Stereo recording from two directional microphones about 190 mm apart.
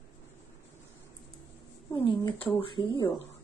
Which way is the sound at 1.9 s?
30° left (ahead or behind).